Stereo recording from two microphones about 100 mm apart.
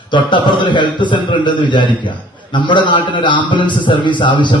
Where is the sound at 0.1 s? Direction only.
55° left (ahead or behind).